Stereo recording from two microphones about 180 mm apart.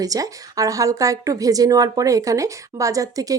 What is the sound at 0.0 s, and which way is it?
Speech, 20° right (ahead or behind).